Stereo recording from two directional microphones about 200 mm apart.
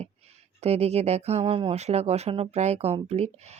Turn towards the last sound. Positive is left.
turn(degrees=-30)  # may be behind; listen again after turning